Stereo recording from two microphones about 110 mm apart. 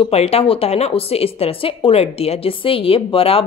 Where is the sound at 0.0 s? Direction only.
65° left (ahead or behind).